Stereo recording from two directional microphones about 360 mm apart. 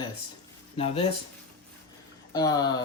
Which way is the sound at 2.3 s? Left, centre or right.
Centre.